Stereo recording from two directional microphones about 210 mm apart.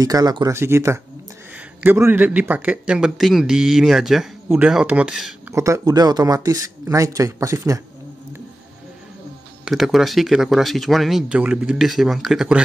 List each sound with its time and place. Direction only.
0.0 s a man's voice: 15° right (ahead or behind)
5.5 s speech: 15° right (ahead or behind)
9.7 s a man's voice: centre (ahead or behind)